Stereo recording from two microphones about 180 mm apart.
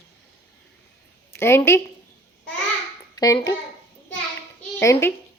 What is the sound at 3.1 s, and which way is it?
Speech, 20° left (ahead or behind).